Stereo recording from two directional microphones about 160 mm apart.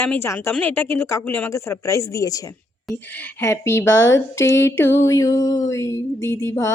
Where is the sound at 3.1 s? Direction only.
10° left (ahead or behind).